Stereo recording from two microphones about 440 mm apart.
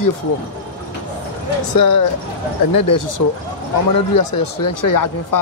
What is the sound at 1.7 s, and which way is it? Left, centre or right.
Speech, left.